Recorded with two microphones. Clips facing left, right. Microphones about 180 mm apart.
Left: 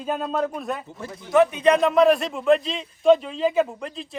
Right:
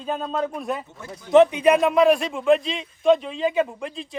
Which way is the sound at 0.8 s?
30° left (ahead or behind).